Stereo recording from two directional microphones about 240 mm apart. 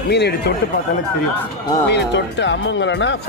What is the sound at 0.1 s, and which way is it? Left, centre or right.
Speech, left.